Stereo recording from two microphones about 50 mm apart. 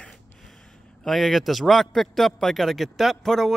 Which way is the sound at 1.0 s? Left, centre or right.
Centre.